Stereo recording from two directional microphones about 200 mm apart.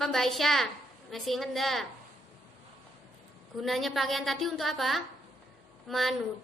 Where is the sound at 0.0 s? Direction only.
Centre (ahead or behind).